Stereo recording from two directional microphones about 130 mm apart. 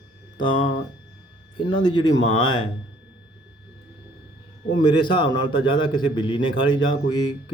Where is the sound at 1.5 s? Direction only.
40° left (ahead or behind).